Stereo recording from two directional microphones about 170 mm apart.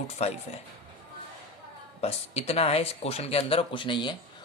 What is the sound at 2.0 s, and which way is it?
Speech, 35° left (ahead or behind).